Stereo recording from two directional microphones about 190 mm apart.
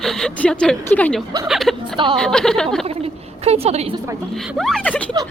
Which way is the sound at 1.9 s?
25° right (ahead or behind).